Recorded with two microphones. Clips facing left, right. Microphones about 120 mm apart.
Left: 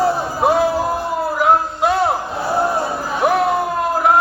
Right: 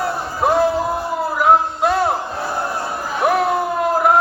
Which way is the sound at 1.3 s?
Centre (ahead or behind).